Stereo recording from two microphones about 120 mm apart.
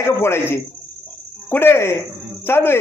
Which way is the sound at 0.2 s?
20° left (ahead or behind).